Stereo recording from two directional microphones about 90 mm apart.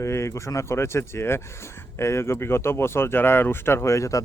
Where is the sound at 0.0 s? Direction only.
30° left (ahead or behind).